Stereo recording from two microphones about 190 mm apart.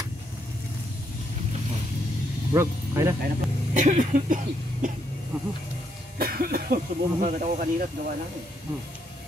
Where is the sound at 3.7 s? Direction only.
40° right (ahead or behind).